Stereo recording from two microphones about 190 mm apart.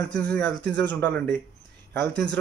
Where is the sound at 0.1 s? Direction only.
5° left (ahead or behind).